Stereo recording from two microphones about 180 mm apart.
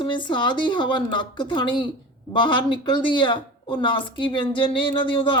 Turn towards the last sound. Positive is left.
turn(degrees=30)  # may be behind; listen again after turning